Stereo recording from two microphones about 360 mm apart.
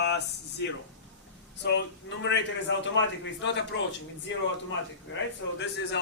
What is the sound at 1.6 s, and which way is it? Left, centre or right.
A man's voice, left.